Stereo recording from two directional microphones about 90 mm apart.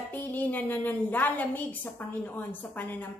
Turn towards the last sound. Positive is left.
turn(degrees=20)  # may be behind; listen again after turning